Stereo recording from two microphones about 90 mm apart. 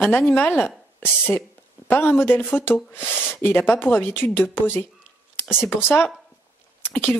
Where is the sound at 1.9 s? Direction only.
25° left (ahead or behind).